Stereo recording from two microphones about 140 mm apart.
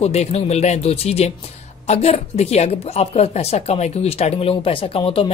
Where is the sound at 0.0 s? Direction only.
50° left (ahead or behind).